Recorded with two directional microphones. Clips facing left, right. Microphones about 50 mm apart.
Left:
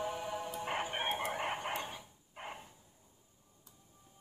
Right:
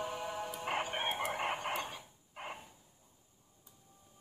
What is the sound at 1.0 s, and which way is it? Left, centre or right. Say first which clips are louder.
Chicken: even; centre.